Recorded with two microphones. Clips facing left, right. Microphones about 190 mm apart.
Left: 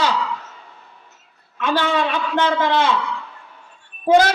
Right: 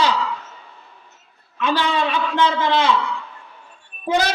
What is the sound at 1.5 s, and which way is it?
A woman's voice, 50° left (ahead or behind).